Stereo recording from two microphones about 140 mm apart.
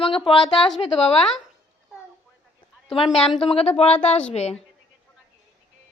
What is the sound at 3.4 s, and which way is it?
A woman's voice, 45° left (ahead or behind).